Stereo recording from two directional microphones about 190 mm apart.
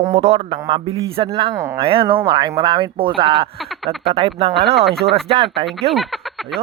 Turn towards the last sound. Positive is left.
turn(degrees=0)  # may be behind; listen again after turning